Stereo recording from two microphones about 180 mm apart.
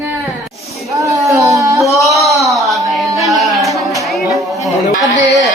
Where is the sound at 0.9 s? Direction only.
20° right (ahead or behind).